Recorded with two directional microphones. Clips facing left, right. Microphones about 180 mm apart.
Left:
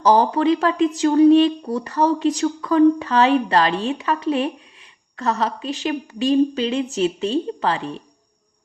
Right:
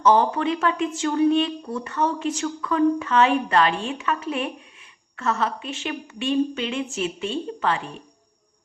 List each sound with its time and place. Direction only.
0.0 s speech: 35° left (ahead or behind)